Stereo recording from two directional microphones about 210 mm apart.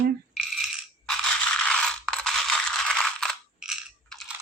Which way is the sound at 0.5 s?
Centre (ahead or behind).